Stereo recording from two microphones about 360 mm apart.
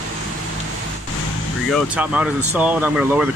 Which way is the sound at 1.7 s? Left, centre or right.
Centre.